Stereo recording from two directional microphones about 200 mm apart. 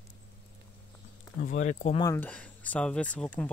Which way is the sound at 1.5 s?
40° left (ahead or behind).